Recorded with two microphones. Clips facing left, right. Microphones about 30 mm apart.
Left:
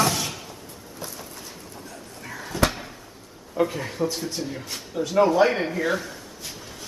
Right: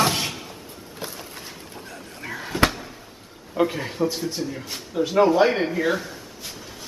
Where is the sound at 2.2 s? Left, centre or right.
Right.